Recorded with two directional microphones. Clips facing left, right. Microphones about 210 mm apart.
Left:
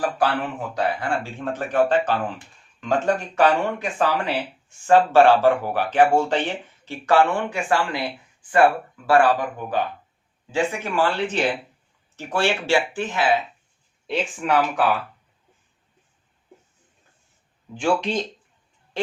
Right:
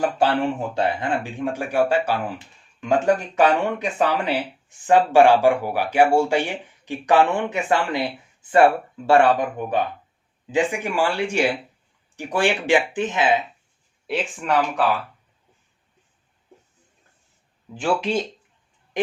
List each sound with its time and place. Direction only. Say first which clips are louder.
0.0 s speech: right 3 dB; 25° right (ahead or behind); by 2.1 s 10° right (ahead or behind)
3.4 s speech: even; 20° right (ahead or behind)
14.1 s speech: left 1 dB; centre (ahead or behind)
17.7 s speech: even; 5° right (ahead or behind)